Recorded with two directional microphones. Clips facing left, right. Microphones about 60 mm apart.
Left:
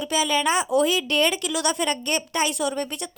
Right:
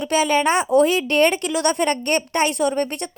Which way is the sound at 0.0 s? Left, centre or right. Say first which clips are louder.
Right 4 dB; right.